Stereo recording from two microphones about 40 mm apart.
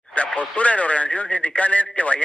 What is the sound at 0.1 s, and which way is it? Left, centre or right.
Speech, left.